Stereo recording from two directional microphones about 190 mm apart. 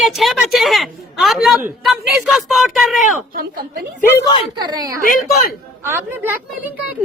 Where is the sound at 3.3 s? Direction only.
50° right (ahead or behind).